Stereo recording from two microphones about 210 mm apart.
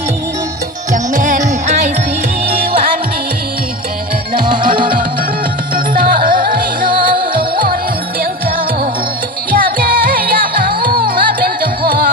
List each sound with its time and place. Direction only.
0.9 s music: 40° right (ahead or behind)
4.4 s music: 40° right (ahead or behind)